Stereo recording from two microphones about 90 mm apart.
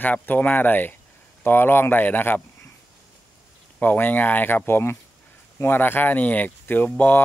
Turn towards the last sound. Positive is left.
turn(degrees=20)  # may be behind; listen again after turning